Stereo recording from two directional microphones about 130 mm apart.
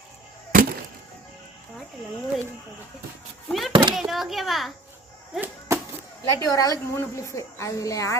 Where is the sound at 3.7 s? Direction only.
35° right (ahead or behind).